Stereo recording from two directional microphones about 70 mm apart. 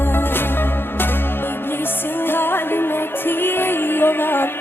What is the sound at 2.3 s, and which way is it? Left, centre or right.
Music, left.